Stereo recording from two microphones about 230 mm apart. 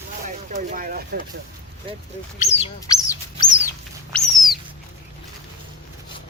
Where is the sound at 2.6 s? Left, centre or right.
Centre.